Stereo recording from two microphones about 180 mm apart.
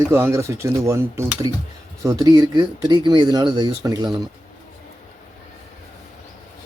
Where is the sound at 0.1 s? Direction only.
15° right (ahead or behind).